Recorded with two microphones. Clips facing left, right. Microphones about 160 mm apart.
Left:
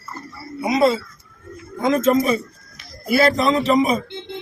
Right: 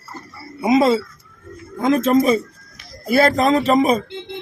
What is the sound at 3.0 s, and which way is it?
Speech, 45° right (ahead or behind).